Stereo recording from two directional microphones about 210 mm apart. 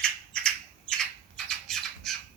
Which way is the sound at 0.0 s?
5° left (ahead or behind).